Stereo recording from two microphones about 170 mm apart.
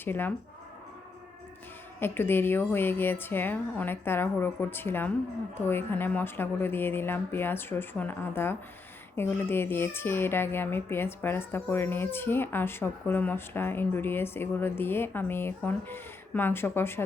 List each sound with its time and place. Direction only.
0.0 s speech: 10° left (ahead or behind)
2.0 s speech: 15° left (ahead or behind)